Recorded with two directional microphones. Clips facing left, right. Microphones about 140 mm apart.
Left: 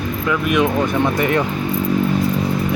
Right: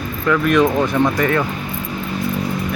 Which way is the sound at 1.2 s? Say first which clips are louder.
Even; 25° left (ahead or behind).